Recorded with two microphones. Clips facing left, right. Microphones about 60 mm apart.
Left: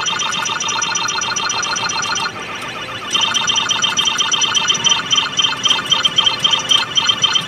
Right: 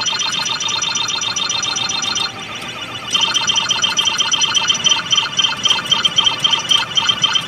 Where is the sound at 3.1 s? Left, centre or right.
Centre.